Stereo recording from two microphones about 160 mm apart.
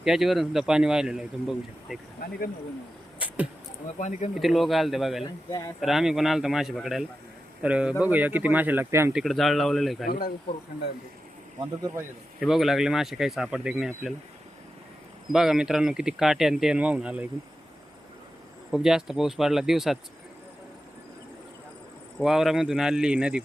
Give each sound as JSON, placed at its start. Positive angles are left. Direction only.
{"t": 0.0, "sound": "speech", "side_deg": 0}
{"t": 3.2, "sound": "a sound", "side_deg": -10}
{"t": 3.9, "sound": "speech", "side_deg": 45}
{"t": 4.4, "sound": "speech", "side_deg": 0}
{"t": 5.5, "sound": "speech", "side_deg": 20}
{"t": 5.8, "sound": "speech", "side_deg": 0}
{"t": 9.1, "sound": "speech", "side_deg": 0}
{"t": 10.1, "sound": "speech", "side_deg": 65}
{"t": 12.4, "sound": "speech", "side_deg": 0}
{"t": 15.3, "sound": "speech", "side_deg": -5}
{"t": 18.7, "sound": "speech", "side_deg": -5}
{"t": 22.2, "sound": "speech", "side_deg": 0}